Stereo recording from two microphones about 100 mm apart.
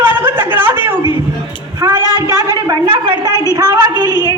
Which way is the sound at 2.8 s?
60° right (ahead or behind).